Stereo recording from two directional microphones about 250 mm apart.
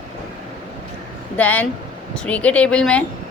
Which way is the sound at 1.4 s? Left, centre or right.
Centre.